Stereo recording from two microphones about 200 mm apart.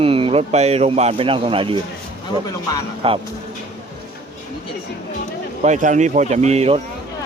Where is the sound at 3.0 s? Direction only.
30° right (ahead or behind).